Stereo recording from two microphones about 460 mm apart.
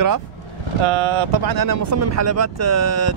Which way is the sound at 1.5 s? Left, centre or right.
Right.